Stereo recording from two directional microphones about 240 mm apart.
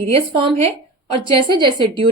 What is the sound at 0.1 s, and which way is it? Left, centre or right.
A woman's voice, right.